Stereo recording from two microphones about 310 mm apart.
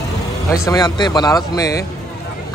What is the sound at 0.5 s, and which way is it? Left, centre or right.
Speech, centre.